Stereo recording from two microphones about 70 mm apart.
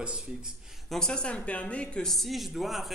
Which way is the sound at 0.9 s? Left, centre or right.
Centre.